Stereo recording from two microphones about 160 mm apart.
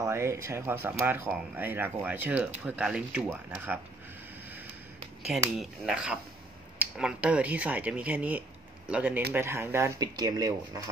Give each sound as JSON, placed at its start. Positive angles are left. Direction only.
{"t": 0.0, "sound": "speech", "side_deg": -15}
{"t": 5.6, "sound": "speech", "side_deg": -5}